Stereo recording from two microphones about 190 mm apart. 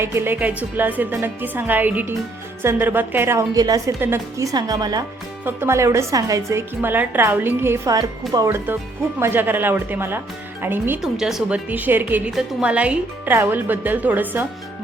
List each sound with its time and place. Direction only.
0.0 s a woman's voice: 15° right (ahead or behind)